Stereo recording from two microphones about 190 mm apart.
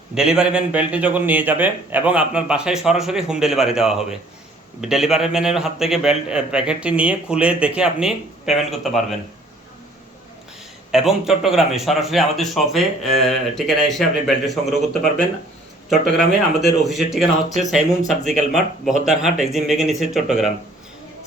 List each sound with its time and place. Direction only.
0.1 s a man's voice: 5° right (ahead or behind)
10.9 s a man's voice: centre (ahead or behind)